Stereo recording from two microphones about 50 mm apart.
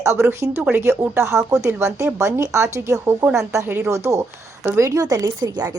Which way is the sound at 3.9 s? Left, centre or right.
Right.